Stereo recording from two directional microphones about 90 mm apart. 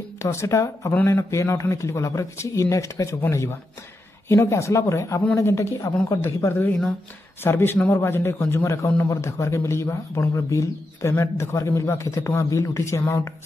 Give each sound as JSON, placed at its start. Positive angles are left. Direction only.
{"t": 0.2, "sound": "a man's voice", "side_deg": 30}